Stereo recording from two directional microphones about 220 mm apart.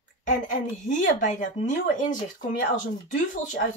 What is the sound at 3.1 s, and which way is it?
Speech, 35° left (ahead or behind).